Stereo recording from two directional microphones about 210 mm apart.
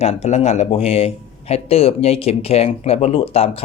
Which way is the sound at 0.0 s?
30° left (ahead or behind).